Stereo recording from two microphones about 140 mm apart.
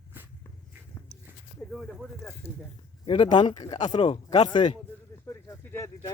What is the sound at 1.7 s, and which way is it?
Speech, centre (ahead or behind).